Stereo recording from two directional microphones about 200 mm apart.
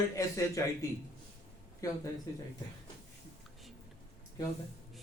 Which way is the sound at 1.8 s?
15° left (ahead or behind).